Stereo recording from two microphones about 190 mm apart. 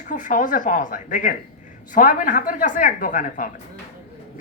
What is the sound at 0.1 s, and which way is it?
Speech, 40° left (ahead or behind).